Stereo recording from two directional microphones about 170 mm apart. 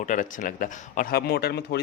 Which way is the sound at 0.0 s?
50° left (ahead or behind).